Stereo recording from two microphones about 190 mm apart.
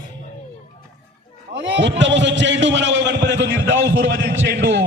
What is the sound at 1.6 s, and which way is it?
A man's voice, 70° right (ahead or behind).